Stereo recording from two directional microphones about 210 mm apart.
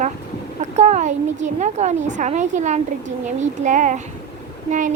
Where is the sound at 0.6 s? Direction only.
35° right (ahead or behind).